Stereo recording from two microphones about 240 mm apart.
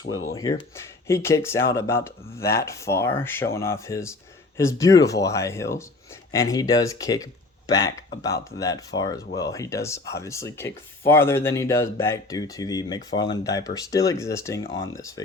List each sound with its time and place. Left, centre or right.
0.0 s speech: left
0.3 s speech: centre